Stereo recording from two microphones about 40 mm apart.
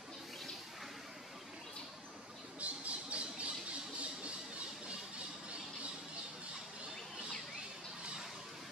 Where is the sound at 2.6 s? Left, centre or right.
Right.